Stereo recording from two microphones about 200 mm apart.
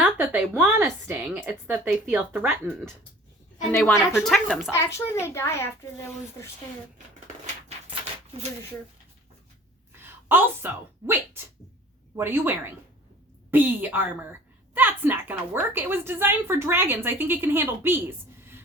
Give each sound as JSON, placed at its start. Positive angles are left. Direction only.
{"t": 0.0, "sound": "a sound", "side_deg": -10}
{"t": 0.5, "sound": "a woman's voice", "side_deg": -10}
{"t": 3.7, "sound": "a child's voice", "side_deg": 10}
{"t": 4.7, "sound": "a child's voice", "side_deg": 15}
{"t": 7.9, "sound": "a sound", "side_deg": -30}
{"t": 10.0, "sound": "a woman's voice", "side_deg": -10}